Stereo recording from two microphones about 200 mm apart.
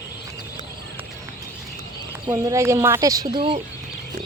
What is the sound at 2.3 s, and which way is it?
Speech, 15° right (ahead or behind).